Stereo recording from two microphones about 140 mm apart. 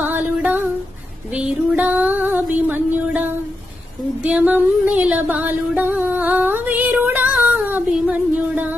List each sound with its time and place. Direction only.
0.0 s female singing: 10° right (ahead or behind)
1.3 s music: 10° right (ahead or behind)